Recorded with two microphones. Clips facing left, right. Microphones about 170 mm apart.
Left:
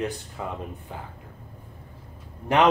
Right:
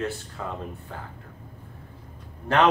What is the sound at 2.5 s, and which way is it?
Speech, 15° left (ahead or behind).